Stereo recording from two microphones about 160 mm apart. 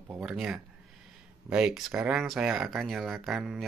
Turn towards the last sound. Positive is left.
turn(degrees=-5)  # may be behind; listen again after turning